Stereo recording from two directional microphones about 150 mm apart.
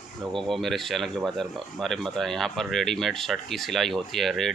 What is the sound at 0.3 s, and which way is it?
Speech, centre (ahead or behind).